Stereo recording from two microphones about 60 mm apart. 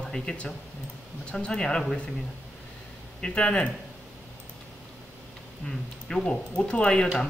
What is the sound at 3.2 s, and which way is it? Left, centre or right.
Speech, centre.